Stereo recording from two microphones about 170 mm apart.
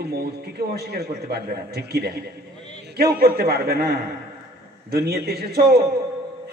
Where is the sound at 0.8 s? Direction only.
65° right (ahead or behind).